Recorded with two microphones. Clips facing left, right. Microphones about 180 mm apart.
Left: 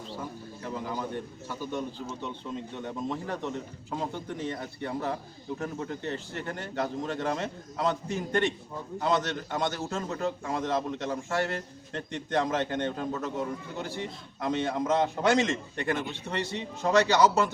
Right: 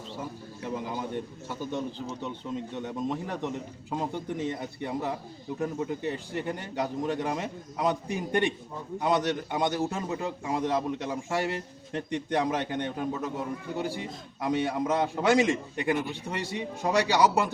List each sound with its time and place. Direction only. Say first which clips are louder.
0.9 s a man's voice: right 1 dB; 15° right (ahead or behind)
2.8 s a man's voice: even; 15° right (ahead or behind)